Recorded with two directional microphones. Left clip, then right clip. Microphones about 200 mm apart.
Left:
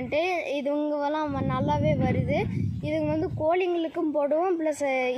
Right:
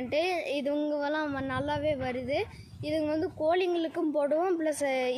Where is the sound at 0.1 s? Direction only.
35° left (ahead or behind).